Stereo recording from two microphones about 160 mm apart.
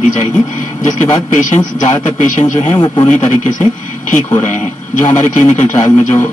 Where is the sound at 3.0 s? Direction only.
50° left (ahead or behind).